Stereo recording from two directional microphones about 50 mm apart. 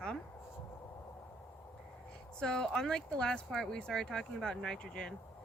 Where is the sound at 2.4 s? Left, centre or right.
Centre.